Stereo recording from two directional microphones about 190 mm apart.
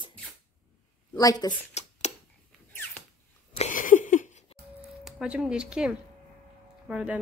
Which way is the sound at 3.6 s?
45° left (ahead or behind).